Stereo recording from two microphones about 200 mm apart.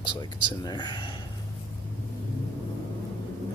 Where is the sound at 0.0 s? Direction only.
25° left (ahead or behind).